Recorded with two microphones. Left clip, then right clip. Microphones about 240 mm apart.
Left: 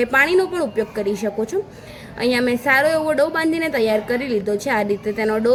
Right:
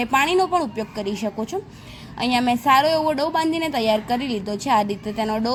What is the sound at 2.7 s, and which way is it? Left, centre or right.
A woman's voice, centre.